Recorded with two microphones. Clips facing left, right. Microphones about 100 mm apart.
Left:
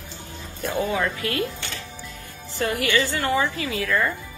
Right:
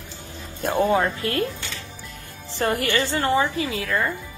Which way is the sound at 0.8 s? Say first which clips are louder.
Right 4 dB; 35° right (ahead or behind).